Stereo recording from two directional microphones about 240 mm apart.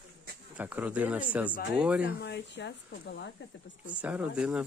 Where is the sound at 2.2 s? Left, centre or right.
Left.